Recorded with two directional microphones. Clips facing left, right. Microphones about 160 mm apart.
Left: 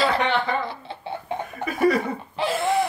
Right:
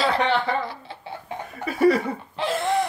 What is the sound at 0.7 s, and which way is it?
Chicken, 25° left (ahead or behind).